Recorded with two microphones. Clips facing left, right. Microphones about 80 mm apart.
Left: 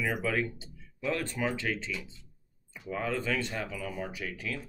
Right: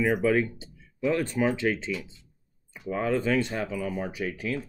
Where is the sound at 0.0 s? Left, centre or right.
Right.